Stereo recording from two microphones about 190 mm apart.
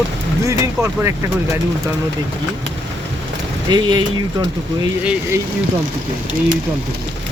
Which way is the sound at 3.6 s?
20° right (ahead or behind).